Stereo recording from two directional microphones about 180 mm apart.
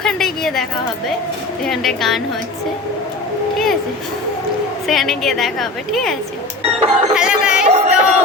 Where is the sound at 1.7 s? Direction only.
Centre (ahead or behind).